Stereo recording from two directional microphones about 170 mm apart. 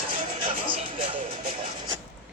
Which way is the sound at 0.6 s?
30° right (ahead or behind).